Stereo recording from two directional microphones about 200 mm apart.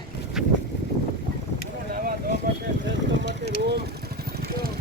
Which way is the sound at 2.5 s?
45° right (ahead or behind).